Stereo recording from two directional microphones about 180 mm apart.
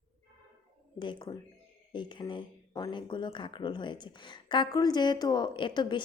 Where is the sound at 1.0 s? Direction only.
25° left (ahead or behind).